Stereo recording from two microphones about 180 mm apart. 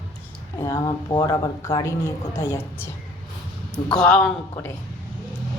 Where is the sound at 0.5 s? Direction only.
25° left (ahead or behind); by 4.7 s 10° left (ahead or behind).